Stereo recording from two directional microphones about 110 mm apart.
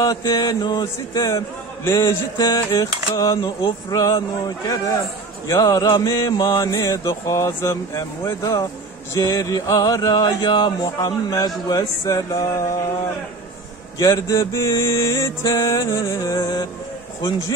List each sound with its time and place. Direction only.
0.0 s music: 35° left (ahead or behind)
13.9 s a man's voice: 35° left (ahead or behind)
14.8 s music: 30° left (ahead or behind)